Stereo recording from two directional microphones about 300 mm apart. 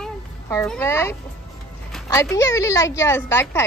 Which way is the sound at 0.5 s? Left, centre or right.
Centre.